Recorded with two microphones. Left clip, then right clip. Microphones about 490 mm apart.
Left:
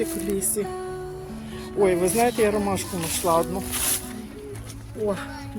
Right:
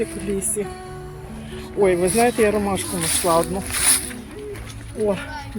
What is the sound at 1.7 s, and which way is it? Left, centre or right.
A woman's voice, left.